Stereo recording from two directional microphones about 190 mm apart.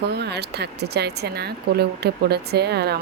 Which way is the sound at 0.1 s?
60° right (ahead or behind).